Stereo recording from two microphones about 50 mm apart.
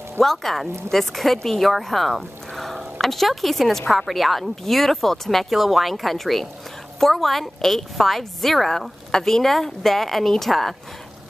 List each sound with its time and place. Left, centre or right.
0.2 s a woman's voice: centre